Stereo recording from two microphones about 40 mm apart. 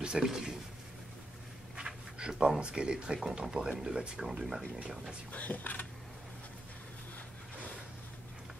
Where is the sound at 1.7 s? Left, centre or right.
Right.